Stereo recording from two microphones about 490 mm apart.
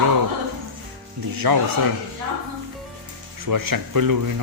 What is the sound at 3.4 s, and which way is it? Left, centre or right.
Speech, right.